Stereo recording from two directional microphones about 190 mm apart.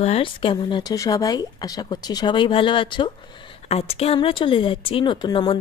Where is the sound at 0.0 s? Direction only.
30° left (ahead or behind).